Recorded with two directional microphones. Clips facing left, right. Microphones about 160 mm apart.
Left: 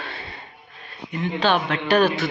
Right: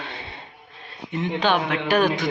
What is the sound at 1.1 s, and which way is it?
A man's voice, 20° right (ahead or behind).